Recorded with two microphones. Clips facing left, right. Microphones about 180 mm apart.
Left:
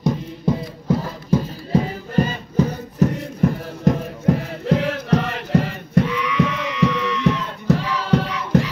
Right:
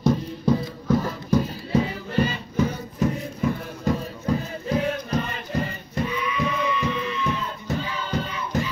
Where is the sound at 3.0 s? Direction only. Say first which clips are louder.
Left 6 dB; 55° left (ahead or behind).